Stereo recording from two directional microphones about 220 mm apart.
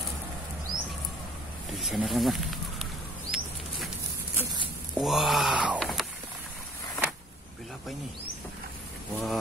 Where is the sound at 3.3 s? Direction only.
60° left (ahead or behind).